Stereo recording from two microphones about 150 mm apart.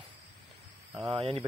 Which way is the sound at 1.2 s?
40° right (ahead or behind).